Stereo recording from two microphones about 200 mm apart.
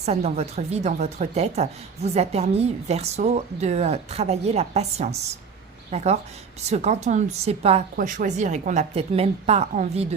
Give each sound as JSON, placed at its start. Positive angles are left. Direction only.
{"t": 0.0, "sound": "a woman's voice", "side_deg": -35}